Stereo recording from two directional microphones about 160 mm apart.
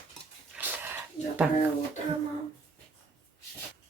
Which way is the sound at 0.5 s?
10° right (ahead or behind).